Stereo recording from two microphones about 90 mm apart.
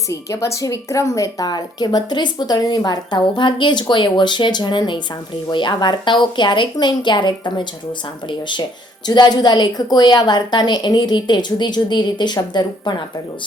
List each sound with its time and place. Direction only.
0.1 s a woman's voice: 35° left (ahead or behind); by 13.0 s 55° left (ahead or behind)